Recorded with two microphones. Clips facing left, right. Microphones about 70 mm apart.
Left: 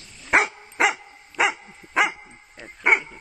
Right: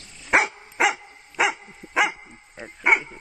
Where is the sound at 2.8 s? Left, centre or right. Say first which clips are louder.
Even; centre.